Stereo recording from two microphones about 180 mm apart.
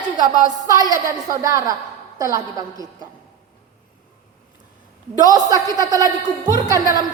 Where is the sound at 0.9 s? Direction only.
20° right (ahead or behind).